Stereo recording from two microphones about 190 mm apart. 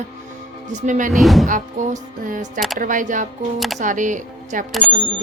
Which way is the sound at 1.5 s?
45° right (ahead or behind).